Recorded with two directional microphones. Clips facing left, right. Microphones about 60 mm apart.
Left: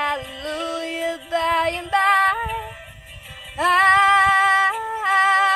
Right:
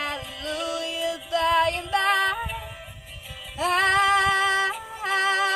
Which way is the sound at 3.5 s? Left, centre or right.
Left.